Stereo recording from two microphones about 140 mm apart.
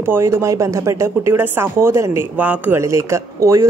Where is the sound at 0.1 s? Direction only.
20° right (ahead or behind).